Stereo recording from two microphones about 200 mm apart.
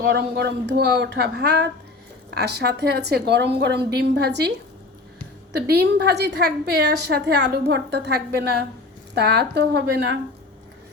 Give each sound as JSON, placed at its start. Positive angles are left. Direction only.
{"t": 0.0, "sound": "a woman's voice", "side_deg": -55}
{"t": 5.6, "sound": "a woman's voice", "side_deg": -55}